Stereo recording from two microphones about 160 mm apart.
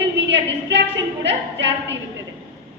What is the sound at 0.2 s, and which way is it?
A woman's voice, 90° right.